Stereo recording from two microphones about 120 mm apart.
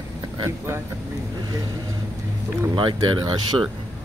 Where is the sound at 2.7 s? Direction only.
40° right (ahead or behind).